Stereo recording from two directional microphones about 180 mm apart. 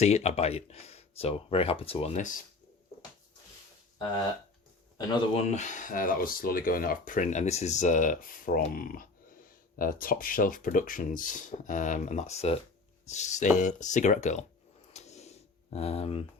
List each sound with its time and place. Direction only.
0.0 s speech: 35° left (ahead or behind)
5.3 s speech: 35° left (ahead or behind)
14.9 s a sound: 40° left (ahead or behind)